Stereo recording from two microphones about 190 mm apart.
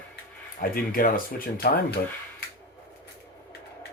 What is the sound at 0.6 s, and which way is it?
Speech, 50° left (ahead or behind).